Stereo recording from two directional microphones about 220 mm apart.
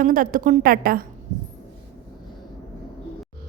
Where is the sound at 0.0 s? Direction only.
40° right (ahead or behind).